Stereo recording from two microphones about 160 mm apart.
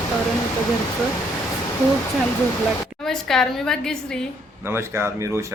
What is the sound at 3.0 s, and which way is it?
A woman's voice, 5° left (ahead or behind).